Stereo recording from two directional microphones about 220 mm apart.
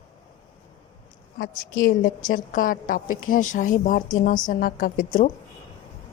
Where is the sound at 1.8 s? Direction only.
40° left (ahead or behind).